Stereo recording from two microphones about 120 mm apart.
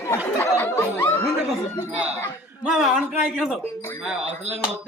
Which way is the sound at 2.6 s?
5° right (ahead or behind).